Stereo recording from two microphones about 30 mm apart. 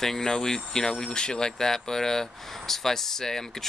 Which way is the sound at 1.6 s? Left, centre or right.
Centre.